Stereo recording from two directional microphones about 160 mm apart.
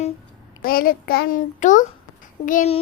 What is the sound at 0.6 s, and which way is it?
Speech, 65° left (ahead or behind).